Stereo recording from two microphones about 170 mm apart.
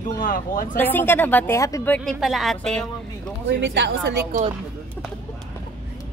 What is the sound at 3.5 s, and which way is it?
Speech, 90° right.